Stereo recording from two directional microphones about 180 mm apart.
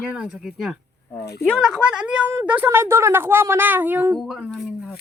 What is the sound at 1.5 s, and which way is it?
A woman's voice, centre (ahead or behind).